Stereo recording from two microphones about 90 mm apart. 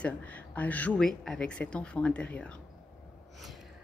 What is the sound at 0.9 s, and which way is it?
Speech, 5° left (ahead or behind).